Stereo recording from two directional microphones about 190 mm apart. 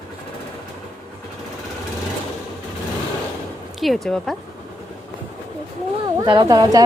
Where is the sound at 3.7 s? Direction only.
Centre (ahead or behind).